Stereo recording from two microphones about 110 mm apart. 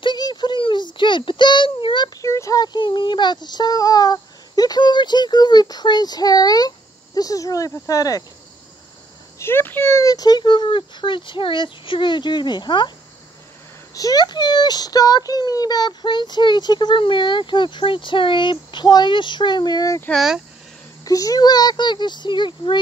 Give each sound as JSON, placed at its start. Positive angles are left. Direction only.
{"t": 0.0, "sound": "a sound", "side_deg": 40}
{"t": 2.2, "sound": "speech", "side_deg": 25}
{"t": 9.4, "sound": "speech", "side_deg": 20}
{"t": 13.9, "sound": "speech", "side_deg": 35}
{"t": 20.1, "sound": "speech", "side_deg": -5}
{"t": 21.0, "sound": "speech", "side_deg": 30}